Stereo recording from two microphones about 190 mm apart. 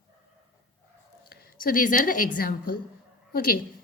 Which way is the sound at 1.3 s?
45° left (ahead or behind).